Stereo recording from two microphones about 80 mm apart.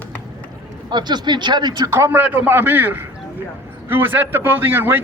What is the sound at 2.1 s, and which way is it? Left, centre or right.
A man's voice, right.